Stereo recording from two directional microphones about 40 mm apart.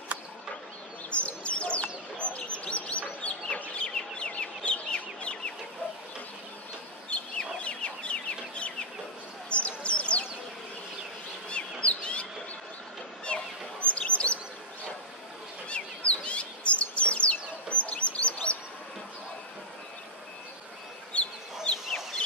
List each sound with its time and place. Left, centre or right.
1.1 s bird: left
2.3 s chirp: left
3.7 s chicken: left
7.1 s chicken: left
9.5 s a sound: left
11.4 s bird: left
15.7 s chirp: left
21.1 s chicken: left